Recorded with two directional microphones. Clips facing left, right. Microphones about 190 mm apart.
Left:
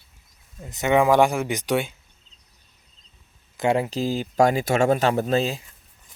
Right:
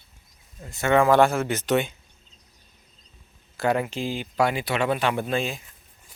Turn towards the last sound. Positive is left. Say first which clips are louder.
# left 4 dB
turn(degrees=35)  # may be behind; listen again after turning